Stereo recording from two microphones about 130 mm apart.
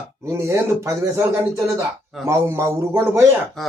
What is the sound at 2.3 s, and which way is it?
Speech, 20° right (ahead or behind).